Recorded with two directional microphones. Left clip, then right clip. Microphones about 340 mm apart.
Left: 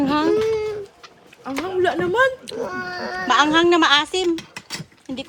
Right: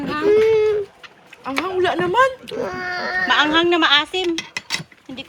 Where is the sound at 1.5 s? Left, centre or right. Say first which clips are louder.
Right 1 dB; centre.